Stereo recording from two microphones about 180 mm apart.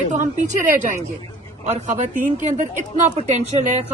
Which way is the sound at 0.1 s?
40° right (ahead or behind).